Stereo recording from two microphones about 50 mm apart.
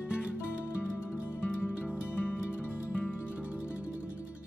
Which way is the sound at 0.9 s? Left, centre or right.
Left.